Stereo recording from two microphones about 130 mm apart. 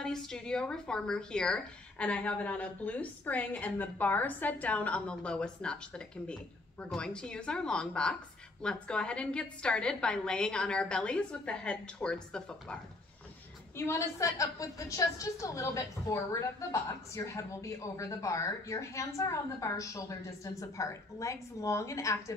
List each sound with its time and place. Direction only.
0.0 s speech: 5° left (ahead or behind)
13.7 s a woman's voice: 20° left (ahead or behind)